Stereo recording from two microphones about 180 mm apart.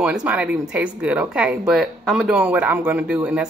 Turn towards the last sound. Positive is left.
turn(degrees=-5)  # may be behind; listen again after turning